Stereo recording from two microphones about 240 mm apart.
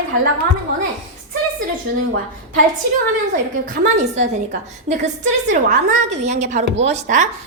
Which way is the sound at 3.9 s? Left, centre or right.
Right.